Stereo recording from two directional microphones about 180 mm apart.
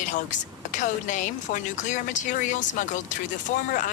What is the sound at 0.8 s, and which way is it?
Speech, 45° left (ahead or behind).